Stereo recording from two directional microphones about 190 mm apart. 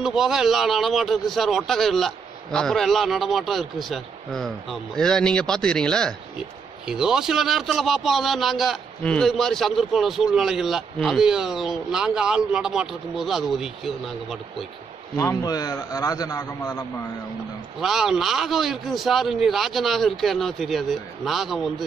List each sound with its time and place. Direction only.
0.0 s a man's voice: centre (ahead or behind)
15.1 s a man's voice: 20° left (ahead or behind)
17.7 s a man's voice: centre (ahead or behind)